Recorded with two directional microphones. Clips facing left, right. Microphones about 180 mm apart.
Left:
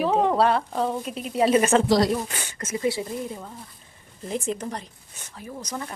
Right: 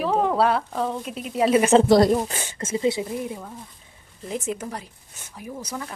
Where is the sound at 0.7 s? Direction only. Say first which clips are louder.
Left 1 dB; 10° left (ahead or behind).